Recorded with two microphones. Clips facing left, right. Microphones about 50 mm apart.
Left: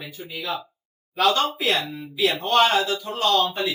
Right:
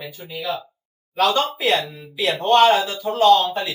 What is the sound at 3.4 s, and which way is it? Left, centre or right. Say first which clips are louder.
Speech: even; centre.